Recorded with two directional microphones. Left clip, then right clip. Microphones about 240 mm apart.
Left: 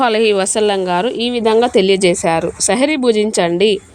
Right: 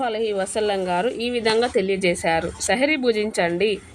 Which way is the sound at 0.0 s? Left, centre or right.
Left.